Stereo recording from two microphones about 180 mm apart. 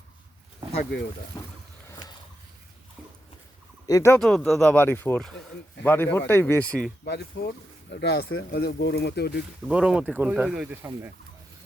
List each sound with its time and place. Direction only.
0.8 s speech: 65° left (ahead or behind)
1.3 s boat: 20° left (ahead or behind)
1.9 s a sound: 25° left (ahead or behind)
3.8 s speech: 15° left (ahead or behind)
4.2 s speech: 5° left (ahead or behind)
7.0 s speech: 65° left (ahead or behind)
9.6 s speech: 5° right (ahead or behind)